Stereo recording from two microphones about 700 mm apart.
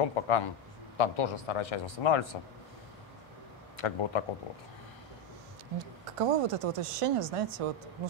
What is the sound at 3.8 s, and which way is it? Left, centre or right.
Speech, left.